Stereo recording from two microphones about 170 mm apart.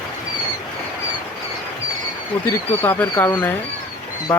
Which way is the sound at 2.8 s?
10° left (ahead or behind).